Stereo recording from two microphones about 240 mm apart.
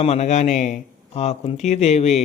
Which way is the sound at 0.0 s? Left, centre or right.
Left.